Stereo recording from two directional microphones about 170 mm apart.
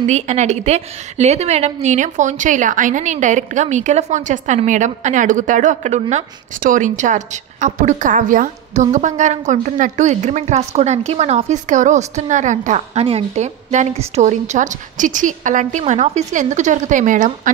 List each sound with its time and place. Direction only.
0.0 s a woman's voice: 40° right (ahead or behind)